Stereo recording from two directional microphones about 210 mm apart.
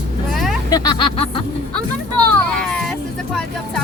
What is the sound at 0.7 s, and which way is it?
Music, 20° left (ahead or behind).